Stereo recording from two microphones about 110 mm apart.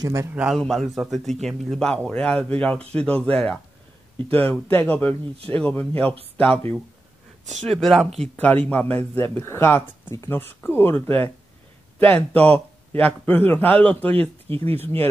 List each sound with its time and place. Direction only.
0.0 s a man's voice: 30° right (ahead or behind)
0.3 s a man's voice: 5° right (ahead or behind); by 6.8 s 10° left (ahead or behind)
7.6 s speech: centre (ahead or behind)
8.2 s speech: 10° left (ahead or behind)
12.5 s speech: 15° left (ahead or behind)
14.5 s speech: 65° right (ahead or behind)